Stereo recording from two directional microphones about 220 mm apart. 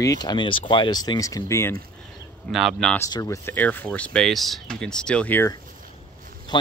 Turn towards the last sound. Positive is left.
turn(degrees=20)  # may be behind; listen again after turning